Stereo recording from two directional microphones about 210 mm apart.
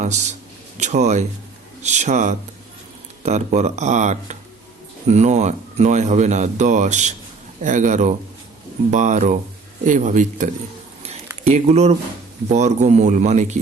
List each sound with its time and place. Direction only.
0.0 s speech: 35° right (ahead or behind)